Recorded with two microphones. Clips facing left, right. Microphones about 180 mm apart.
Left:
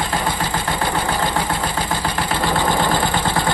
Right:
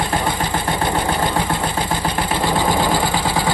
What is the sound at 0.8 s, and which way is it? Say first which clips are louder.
Engine: right 1 dB; 25° right (ahead or behind).